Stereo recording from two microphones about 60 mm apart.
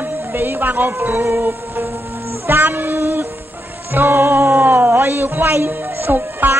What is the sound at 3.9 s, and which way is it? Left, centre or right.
Speech, right.